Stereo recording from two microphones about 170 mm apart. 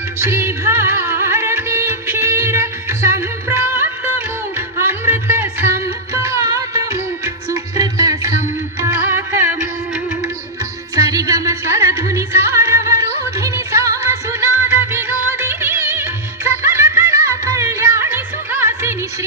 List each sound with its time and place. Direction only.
0.2 s music: 15° right (ahead or behind)
4.5 s music: 15° right (ahead or behind)
10.9 s music: 20° right (ahead or behind)